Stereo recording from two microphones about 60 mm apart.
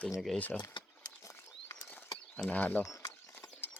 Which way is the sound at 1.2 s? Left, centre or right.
Left.